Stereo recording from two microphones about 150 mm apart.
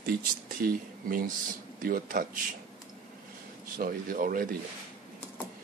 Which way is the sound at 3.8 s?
75° right (ahead or behind).